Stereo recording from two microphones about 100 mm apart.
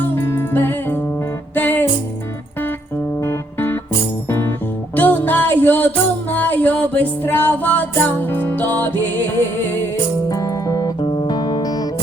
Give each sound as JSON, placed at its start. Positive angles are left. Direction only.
{"t": 0.0, "sound": "music", "side_deg": 25}
{"t": 3.2, "sound": "music", "side_deg": 25}
{"t": 4.9, "sound": "music", "side_deg": 20}
{"t": 10.2, "sound": "music", "side_deg": 40}
{"t": 11.0, "sound": "music", "side_deg": 55}